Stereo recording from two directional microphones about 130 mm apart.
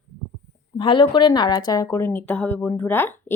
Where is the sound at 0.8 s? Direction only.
40° left (ahead or behind).